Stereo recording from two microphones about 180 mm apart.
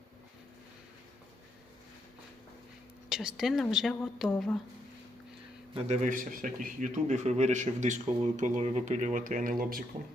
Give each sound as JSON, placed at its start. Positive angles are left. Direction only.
{"t": 3.1, "sound": "a woman's voice", "side_deg": 0}
{"t": 5.7, "sound": "speech", "side_deg": -40}